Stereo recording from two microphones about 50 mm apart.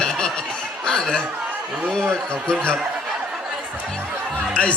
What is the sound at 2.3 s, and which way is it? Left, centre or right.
Speech, centre.